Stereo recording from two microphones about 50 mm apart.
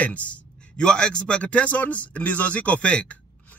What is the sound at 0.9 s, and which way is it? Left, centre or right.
A man's voice, centre.